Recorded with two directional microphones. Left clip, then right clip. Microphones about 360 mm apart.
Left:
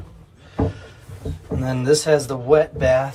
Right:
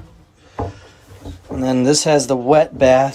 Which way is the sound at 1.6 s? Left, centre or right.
Centre.